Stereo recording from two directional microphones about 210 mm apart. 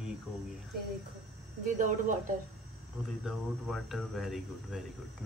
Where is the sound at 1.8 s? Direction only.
40° right (ahead or behind).